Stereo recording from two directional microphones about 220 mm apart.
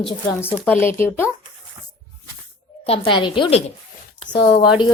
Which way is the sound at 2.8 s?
25° left (ahead or behind).